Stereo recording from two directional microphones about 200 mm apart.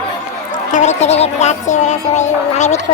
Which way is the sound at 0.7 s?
35° left (ahead or behind).